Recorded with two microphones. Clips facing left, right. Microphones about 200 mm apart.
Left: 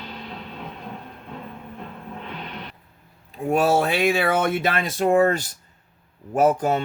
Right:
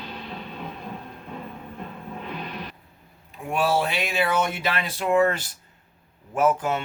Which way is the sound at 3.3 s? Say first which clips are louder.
Left 4 dB; 40° left (ahead or behind).